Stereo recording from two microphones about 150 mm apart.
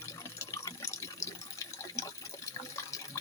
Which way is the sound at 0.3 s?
20° left (ahead or behind).